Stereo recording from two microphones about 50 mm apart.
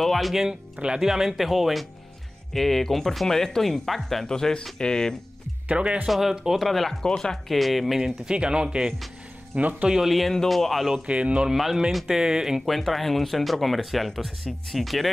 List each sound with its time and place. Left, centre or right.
0.0 s speech: centre
0.4 s speech: centre
5.7 s speech: right
6.0 s speech: centre
6.6 s speech: centre
8.0 s speech: centre
9.6 s speech: right
9.8 s speech: centre
11.1 s speech: right
11.4 s speech: centre
12.2 s speech: centre
12.6 s speech: centre